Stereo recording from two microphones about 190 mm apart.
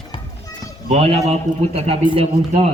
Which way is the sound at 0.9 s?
35° right (ahead or behind).